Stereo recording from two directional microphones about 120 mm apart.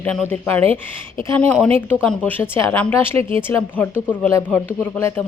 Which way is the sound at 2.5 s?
20° left (ahead or behind).